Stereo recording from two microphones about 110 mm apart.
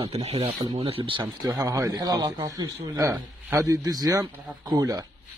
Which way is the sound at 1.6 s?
30° right (ahead or behind).